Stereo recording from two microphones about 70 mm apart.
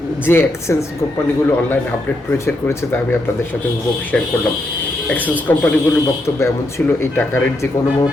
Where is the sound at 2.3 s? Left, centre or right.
Left.